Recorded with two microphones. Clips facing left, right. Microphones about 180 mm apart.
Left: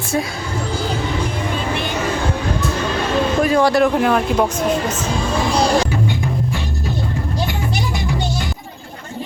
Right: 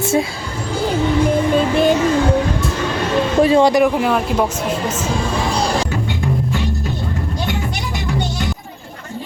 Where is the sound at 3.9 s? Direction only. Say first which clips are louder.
Left 1 dB; 5° right (ahead or behind).